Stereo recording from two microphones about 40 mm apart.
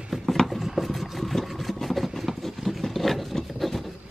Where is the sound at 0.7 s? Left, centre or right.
Centre.